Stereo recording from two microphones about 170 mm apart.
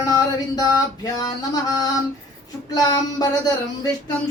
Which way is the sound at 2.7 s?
20° left (ahead or behind).